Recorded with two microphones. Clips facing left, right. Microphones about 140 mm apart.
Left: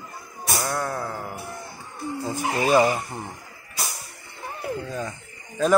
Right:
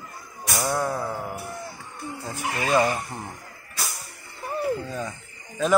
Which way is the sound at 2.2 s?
20° left (ahead or behind).